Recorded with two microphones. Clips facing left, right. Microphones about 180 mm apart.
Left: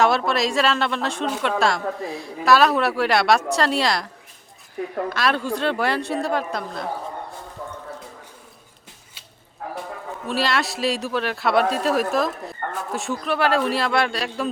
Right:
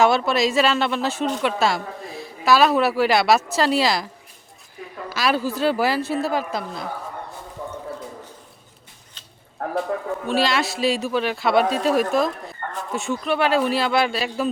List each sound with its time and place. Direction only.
0.0 s speech: centre (ahead or behind)
9.6 s a sound: 60° right (ahead or behind)
10.2 s speech: centre (ahead or behind)